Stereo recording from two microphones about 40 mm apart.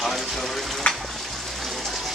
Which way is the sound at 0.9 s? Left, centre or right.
Centre.